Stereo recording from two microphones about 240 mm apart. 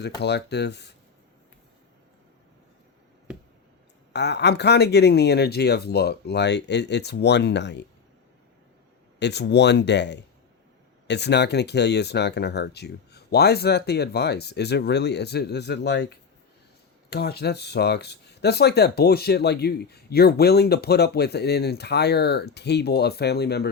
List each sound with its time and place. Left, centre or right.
0.2 s speech: left
4.1 s speech: left
9.1 s speech: left
17.1 s speech: left